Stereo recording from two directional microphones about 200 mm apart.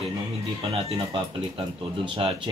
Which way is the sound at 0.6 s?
30° right (ahead or behind).